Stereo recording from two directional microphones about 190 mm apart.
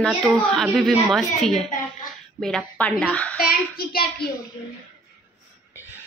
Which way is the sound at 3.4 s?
50° left (ahead or behind).